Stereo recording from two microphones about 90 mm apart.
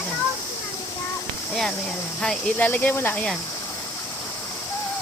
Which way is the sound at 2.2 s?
5° left (ahead or behind).